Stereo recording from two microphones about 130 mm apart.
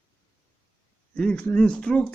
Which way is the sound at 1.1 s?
5° left (ahead or behind).